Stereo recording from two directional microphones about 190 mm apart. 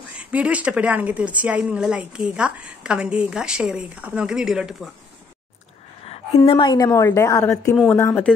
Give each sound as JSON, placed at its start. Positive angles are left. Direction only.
{"t": 0.2, "sound": "a woman's voice", "side_deg": -5}
{"t": 6.0, "sound": "a woman's voice", "side_deg": 30}